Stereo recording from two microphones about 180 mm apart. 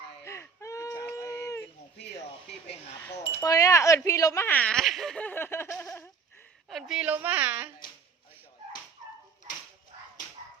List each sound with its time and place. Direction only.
0.3 s whimper: 15° left (ahead or behind)
3.0 s speech: 20° left (ahead or behind)
5.8 s a sound: 15° left (ahead or behind)
6.7 s a woman's voice: centre (ahead or behind)